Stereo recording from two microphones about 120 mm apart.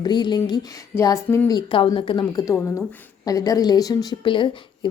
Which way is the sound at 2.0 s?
45° left (ahead or behind).